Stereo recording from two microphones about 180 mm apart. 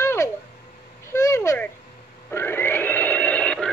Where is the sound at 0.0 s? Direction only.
15° left (ahead or behind).